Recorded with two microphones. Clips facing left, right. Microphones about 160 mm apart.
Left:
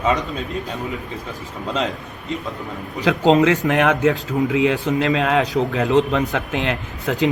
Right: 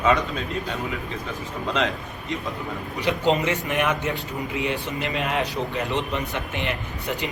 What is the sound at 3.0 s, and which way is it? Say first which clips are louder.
Speech: left 7 dB; 90° left.